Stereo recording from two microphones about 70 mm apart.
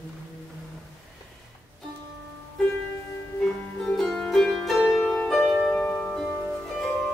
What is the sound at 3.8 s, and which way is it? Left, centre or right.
Music, centre.